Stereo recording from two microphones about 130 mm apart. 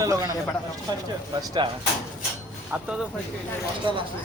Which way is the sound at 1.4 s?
35° right (ahead or behind).